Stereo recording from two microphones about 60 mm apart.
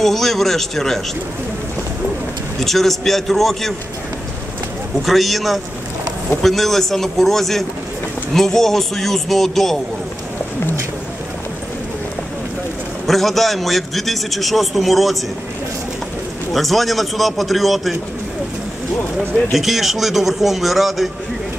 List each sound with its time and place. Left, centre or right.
0.0 s a man's voice: centre
2.6 s a man's voice: centre
5.0 s a man's voice: centre
13.0 s a man's voice: centre
16.5 s a man's voice: centre
19.5 s a man's voice: centre